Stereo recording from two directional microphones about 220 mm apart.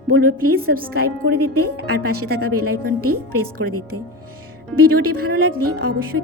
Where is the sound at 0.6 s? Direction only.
40° right (ahead or behind).